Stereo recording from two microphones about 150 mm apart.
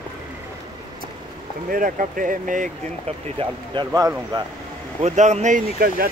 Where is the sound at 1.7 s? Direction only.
65° right (ahead or behind).